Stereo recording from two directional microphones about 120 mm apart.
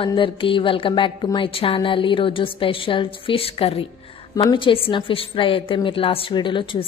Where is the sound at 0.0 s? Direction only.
45° left (ahead or behind).